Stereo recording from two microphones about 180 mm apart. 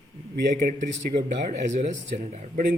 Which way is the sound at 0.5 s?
45° right (ahead or behind).